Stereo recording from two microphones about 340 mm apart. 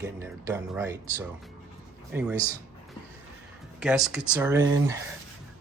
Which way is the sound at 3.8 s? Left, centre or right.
Centre.